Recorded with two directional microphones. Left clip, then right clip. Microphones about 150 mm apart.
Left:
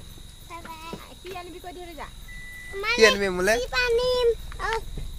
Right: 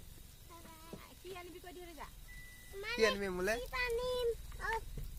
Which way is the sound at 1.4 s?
90° right.